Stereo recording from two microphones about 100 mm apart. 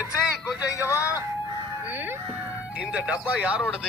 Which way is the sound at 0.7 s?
30° left (ahead or behind).